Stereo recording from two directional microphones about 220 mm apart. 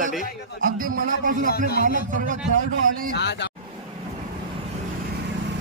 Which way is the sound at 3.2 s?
50° left (ahead or behind).